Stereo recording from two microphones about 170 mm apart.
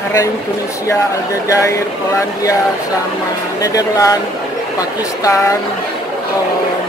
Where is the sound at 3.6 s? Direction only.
20° left (ahead or behind).